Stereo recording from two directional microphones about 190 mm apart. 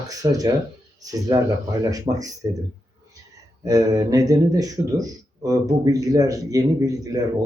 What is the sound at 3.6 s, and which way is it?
Speech, 20° right (ahead or behind).